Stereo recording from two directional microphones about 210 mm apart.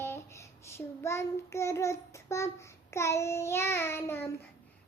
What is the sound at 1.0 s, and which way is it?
A child's voice, 15° left (ahead or behind).